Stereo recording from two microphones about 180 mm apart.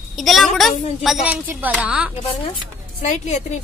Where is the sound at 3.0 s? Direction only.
40° left (ahead or behind).